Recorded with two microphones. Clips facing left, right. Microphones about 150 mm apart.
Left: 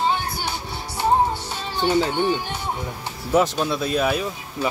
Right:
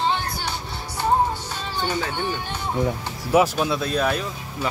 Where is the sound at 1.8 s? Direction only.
20° left (ahead or behind).